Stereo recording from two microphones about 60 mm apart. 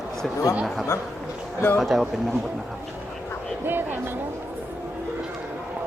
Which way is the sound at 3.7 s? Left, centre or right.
Right.